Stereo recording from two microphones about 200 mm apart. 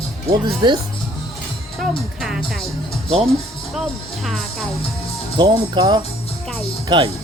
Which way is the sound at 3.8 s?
Centre (ahead or behind).